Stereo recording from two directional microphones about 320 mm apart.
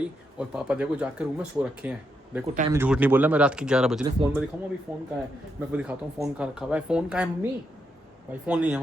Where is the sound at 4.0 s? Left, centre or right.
Centre.